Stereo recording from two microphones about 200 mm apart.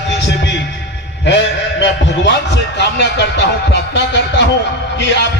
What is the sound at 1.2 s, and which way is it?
A man's voice, 60° left (ahead or behind).